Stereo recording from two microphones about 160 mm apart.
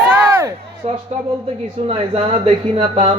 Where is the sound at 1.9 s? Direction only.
35° right (ahead or behind).